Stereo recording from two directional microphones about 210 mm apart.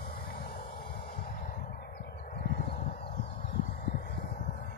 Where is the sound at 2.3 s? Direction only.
40° left (ahead or behind).